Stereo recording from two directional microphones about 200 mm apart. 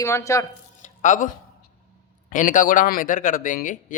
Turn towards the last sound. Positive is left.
turn(degrees=40)  # may be behind; listen again after turning